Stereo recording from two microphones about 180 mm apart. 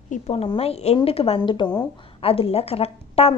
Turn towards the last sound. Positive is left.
turn(degrees=35)  # may be behind; listen again after turning